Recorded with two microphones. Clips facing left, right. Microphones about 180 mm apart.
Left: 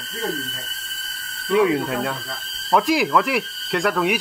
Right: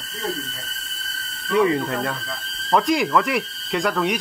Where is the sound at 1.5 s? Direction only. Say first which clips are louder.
Left 1 dB; centre (ahead or behind).